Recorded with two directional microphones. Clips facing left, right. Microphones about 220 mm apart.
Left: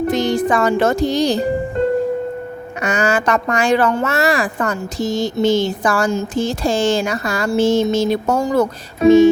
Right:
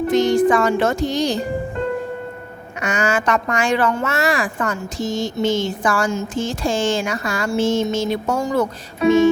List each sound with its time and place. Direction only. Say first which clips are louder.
0.1 s speech: right 6 dB; 35° left (ahead or behind)
2.8 s speech: left 2 dB; 35° left (ahead or behind)